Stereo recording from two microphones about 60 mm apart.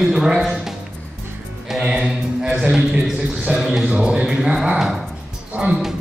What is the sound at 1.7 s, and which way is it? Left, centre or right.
Music, centre.